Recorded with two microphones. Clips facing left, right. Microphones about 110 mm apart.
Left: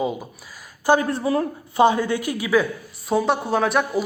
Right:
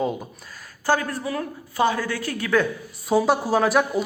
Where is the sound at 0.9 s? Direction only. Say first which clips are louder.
Left 4 dB; 25° left (ahead or behind).